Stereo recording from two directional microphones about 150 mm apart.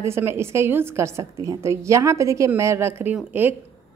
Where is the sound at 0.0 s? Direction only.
15° right (ahead or behind).